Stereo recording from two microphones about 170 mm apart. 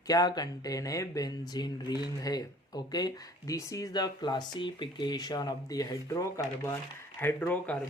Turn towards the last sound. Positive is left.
turn(degrees=10)  # may be behind; listen again after turning